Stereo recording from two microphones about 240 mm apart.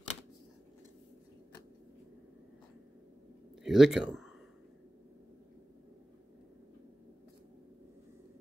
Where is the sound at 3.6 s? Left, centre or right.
Centre.